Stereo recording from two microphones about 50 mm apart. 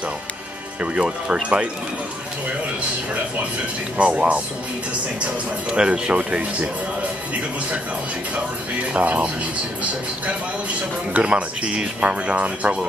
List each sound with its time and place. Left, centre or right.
0.7 s speech: right
4.0 s speech: right
8.9 s speech: right
11.1 s speech: right